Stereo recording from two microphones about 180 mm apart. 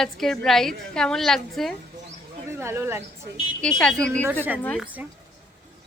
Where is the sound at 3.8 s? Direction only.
5° left (ahead or behind).